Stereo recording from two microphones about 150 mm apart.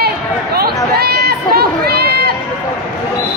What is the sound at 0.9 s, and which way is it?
Run, 90° right.